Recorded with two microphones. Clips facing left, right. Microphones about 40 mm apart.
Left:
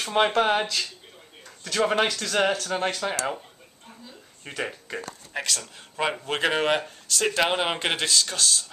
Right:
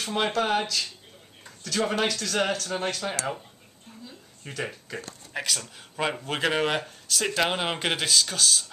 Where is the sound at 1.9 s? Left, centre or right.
Centre.